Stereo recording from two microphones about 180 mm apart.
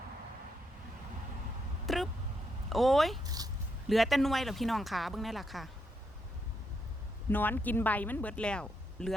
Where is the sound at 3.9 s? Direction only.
Centre (ahead or behind).